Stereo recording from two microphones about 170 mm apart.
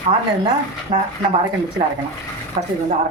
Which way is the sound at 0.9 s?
45° right (ahead or behind).